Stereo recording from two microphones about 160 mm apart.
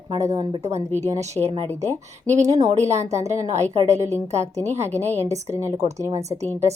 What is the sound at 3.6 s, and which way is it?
Speech, 45° right (ahead or behind).